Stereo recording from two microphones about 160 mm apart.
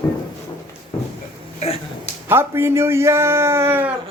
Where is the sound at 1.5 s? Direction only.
40° left (ahead or behind).